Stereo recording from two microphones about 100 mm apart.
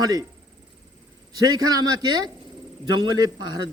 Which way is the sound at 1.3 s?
40° right (ahead or behind).